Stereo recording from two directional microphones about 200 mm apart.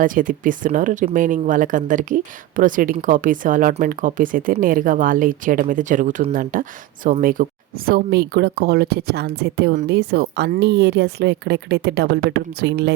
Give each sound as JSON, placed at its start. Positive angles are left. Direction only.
{"t": 0.0, "sound": "speech", "side_deg": -45}